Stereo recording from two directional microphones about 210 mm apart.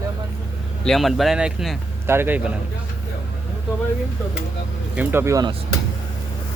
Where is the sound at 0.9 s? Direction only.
Centre (ahead or behind).